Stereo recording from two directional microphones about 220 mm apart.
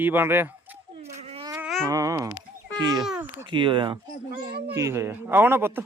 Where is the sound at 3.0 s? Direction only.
5° right (ahead or behind).